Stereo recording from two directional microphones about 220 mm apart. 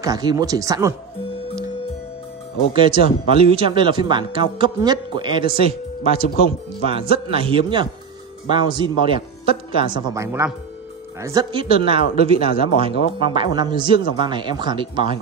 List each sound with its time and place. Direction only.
0.0 s speech: 15° right (ahead or behind)
2.7 s speech: 25° right (ahead or behind)